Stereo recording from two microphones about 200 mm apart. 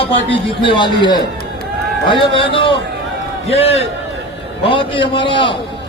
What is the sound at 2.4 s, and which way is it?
A man's voice, 25° left (ahead or behind).